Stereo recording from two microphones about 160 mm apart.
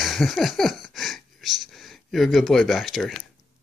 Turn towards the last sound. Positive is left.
turn(degrees=0)  # may be behind; listen again after turning